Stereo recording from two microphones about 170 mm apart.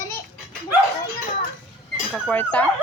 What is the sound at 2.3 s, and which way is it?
Speech, 10° left (ahead or behind).